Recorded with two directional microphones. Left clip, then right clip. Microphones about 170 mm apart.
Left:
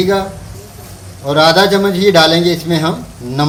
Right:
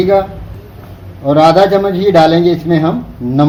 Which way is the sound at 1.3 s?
40° right (ahead or behind).